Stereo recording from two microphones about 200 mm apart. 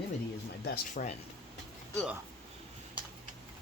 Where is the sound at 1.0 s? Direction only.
40° left (ahead or behind).